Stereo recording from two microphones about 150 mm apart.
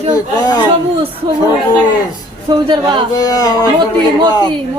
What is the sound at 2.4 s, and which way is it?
Speech, 30° right (ahead or behind).